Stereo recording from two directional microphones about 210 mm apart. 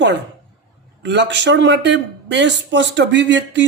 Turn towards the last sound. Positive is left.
turn(degrees=-60)  # may be behind; listen again after turning